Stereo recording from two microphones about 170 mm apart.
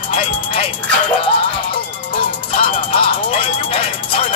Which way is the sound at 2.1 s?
30° left (ahead or behind).